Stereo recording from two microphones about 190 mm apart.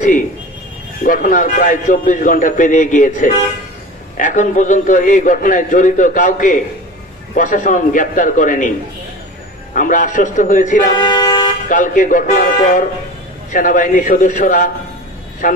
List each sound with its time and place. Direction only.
1.0 s a man's voice: 45° left (ahead or behind)
9.8 s a man's voice: 45° left (ahead or behind)
11.0 s vehicle: 25° left (ahead or behind)
11.7 s a man's voice: 45° left (ahead or behind)